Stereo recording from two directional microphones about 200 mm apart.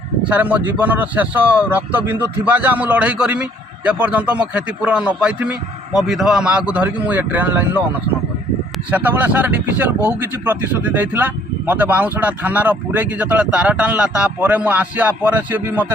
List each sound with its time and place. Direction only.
0.3 s a man's voice: 5° right (ahead or behind)
8.9 s speech: 10° right (ahead or behind)